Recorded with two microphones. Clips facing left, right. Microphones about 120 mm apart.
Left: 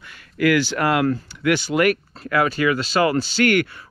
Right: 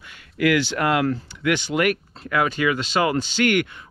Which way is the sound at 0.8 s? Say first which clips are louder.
Left 1 dB; 35° left (ahead or behind).